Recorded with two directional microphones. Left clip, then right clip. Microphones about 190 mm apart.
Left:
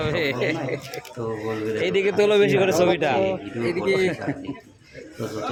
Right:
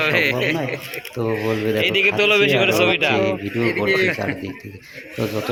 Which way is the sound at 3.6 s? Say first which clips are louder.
Right 3 dB; 70° left (ahead or behind).